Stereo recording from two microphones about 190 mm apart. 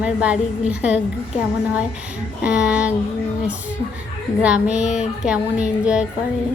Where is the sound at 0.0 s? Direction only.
5° right (ahead or behind).